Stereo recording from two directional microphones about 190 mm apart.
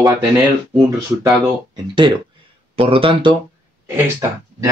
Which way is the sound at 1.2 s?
20° right (ahead or behind).